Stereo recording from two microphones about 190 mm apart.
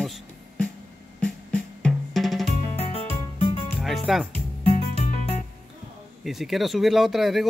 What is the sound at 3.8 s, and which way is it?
Music, centre (ahead or behind).